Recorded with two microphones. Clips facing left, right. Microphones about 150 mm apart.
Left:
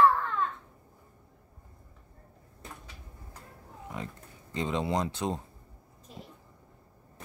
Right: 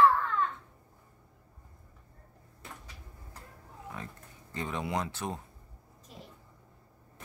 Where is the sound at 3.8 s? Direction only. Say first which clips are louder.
Left 4 dB; 20° left (ahead or behind).